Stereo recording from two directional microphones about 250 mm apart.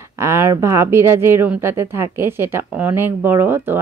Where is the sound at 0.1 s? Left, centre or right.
Centre.